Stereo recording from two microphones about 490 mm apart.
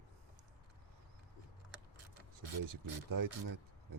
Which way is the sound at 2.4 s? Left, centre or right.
Right.